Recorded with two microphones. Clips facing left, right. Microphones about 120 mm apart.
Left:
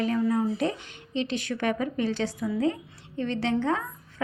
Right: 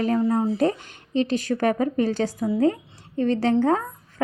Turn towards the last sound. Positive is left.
turn(degrees=-40)  # may be behind; listen again after turning